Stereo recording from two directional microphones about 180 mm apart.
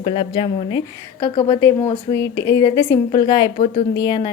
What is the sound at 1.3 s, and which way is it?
A woman's voice, 20° left (ahead or behind).